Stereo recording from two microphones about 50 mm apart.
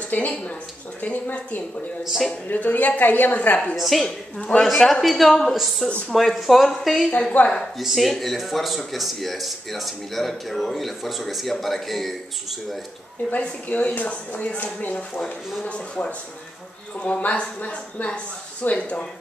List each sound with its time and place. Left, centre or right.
0.1 s a woman's voice: left
3.7 s speech: centre
4.0 s speech: centre
4.6 s speech: centre
7.3 s speech: left
7.8 s speech: centre
13.3 s speech: left